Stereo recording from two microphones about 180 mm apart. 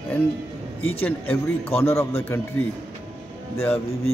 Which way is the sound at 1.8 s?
15° left (ahead or behind).